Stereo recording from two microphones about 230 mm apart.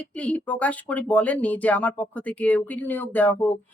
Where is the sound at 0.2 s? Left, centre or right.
Centre.